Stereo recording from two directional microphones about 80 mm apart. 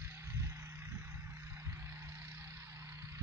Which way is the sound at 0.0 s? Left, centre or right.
Right.